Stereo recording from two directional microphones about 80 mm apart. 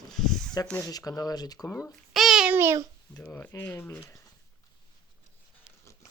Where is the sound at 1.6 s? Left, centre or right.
Left.